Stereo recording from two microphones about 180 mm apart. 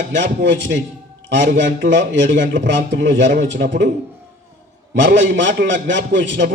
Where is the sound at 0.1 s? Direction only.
85° right.